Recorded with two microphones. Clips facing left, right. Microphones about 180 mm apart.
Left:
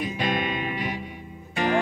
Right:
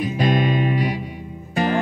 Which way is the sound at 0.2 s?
40° right (ahead or behind).